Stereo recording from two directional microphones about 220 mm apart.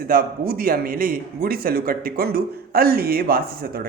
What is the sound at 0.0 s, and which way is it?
A man's voice, 40° right (ahead or behind).